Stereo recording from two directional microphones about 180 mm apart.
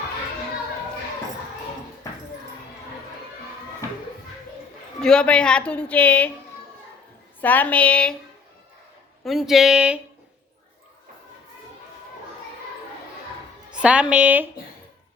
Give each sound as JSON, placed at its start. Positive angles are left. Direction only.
{"t": 2.0, "sound": "dog", "side_deg": 15}
{"t": 4.9, "sound": "a woman's voice", "side_deg": 5}
{"t": 7.4, "sound": "a woman's voice", "side_deg": 10}
{"t": 9.2, "sound": "speech", "side_deg": 0}
{"t": 13.7, "sound": "a woman's voice", "side_deg": -5}